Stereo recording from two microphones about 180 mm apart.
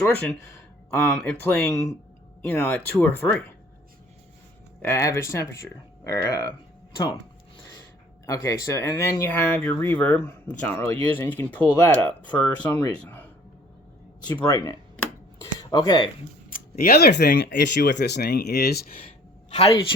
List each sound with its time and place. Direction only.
0.0 s speech: 10° left (ahead or behind)
1.6 s speech: 15° left (ahead or behind)
4.8 s speech: 15° left (ahead or behind)
8.3 s speech: 20° left (ahead or behind)
14.3 s speech: 15° left (ahead or behind)
14.9 s a sound: 10° left (ahead or behind)
15.5 s speech: 20° left (ahead or behind)
16.5 s speech: 55° left (ahead or behind)
19.5 s speech: 35° left (ahead or behind)